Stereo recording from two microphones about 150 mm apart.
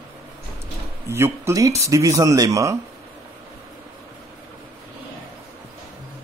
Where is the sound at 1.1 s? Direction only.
15° right (ahead or behind).